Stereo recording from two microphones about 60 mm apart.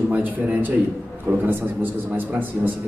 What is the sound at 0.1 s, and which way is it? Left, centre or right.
A man's voice, right.